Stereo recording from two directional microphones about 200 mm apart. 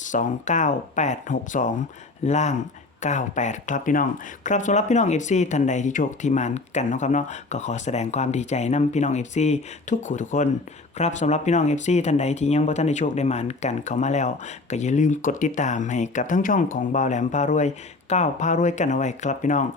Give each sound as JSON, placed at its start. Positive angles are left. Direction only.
{"t": 0.0, "sound": "speech", "side_deg": 40}